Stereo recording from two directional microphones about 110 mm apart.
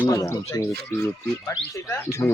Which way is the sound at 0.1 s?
30° left (ahead or behind).